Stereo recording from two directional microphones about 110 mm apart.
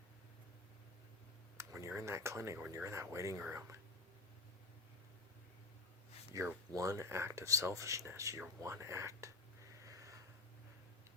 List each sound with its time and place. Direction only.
1.5 s speech: 25° right (ahead or behind)
6.3 s speech: 30° right (ahead or behind)
9.8 s a sound: 30° right (ahead or behind)